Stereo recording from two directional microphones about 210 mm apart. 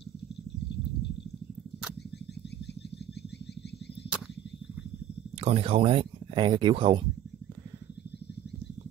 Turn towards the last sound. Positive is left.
turn(degrees=-25)  # may be behind; listen again after turning